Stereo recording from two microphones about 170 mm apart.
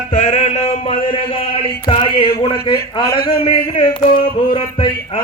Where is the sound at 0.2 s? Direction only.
45° left (ahead or behind).